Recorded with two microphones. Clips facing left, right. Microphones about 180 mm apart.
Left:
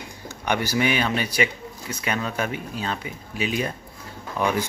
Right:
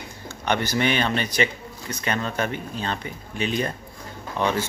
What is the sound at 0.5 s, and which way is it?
Speech, 10° left (ahead or behind).